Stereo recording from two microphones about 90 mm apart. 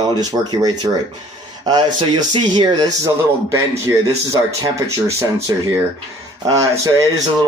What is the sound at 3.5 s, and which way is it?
Speech, 35° right (ahead or behind).